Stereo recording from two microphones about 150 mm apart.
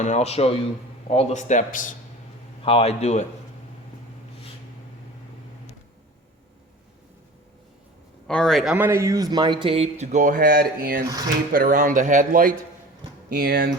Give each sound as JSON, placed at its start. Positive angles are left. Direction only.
{"t": 0.0, "sound": "a man's voice", "side_deg": 50}
{"t": 2.6, "sound": "a man's voice", "side_deg": 40}
{"t": 8.3, "sound": "speech", "side_deg": 5}
{"t": 8.7, "sound": "speech", "side_deg": -15}
{"t": 13.3, "sound": "speech", "side_deg": -90}